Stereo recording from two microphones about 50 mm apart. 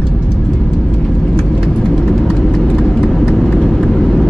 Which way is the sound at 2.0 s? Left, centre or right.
Centre.